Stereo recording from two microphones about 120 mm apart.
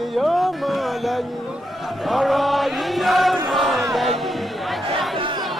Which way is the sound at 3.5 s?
Centre (ahead or behind).